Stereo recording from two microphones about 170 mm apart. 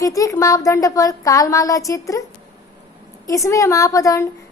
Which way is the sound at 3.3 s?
20° left (ahead or behind).